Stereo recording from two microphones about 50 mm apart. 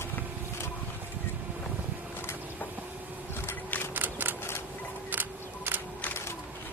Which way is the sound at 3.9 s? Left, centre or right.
Right.